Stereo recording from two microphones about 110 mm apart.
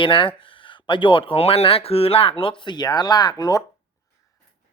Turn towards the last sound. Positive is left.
turn(degrees=35)  # may be behind; listen again after turning